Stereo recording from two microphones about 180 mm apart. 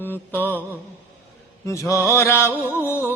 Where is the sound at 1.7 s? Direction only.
15° left (ahead or behind).